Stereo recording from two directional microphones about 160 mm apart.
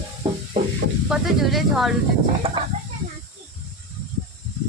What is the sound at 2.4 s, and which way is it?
Speech, 35° right (ahead or behind).